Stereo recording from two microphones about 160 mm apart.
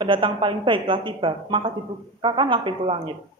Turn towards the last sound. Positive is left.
turn(degrees=-30)  # may be behind; listen again after turning